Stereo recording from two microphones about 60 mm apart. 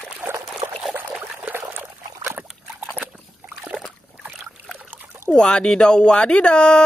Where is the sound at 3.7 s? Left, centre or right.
Right.